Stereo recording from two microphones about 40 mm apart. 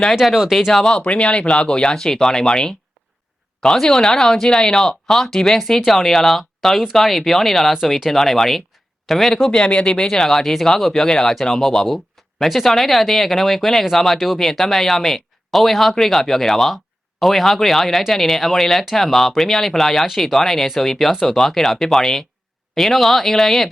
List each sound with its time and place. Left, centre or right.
0.2 s speech: centre
0.7 s speech: centre
0.9 s speech: left; by 9.5 s centre
9.6 s speech: left
9.9 s speech: centre
10.9 s speech: centre